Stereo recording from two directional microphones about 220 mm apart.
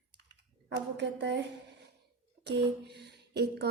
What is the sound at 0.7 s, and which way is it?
Speech, 55° right (ahead or behind).